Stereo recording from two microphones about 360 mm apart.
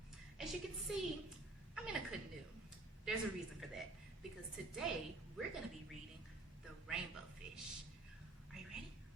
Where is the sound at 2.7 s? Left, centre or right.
Centre.